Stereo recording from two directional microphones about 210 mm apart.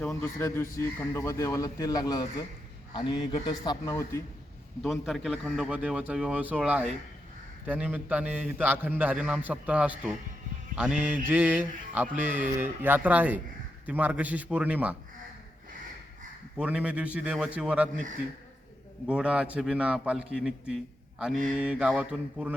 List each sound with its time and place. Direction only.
0.0 s a man's voice: 10° left (ahead or behind)
4.8 s a man's voice: centre (ahead or behind)
16.6 s a man's voice: 5° right (ahead or behind)
19.0 s a man's voice: 5° right (ahead or behind)